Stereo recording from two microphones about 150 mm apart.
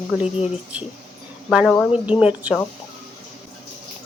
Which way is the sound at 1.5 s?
5° right (ahead or behind).